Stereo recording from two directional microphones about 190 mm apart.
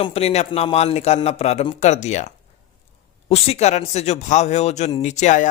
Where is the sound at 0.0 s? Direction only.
30° left (ahead or behind).